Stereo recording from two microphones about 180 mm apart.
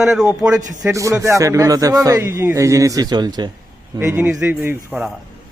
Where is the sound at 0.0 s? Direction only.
5° right (ahead or behind).